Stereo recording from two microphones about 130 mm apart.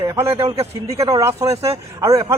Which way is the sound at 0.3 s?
50° right (ahead or behind).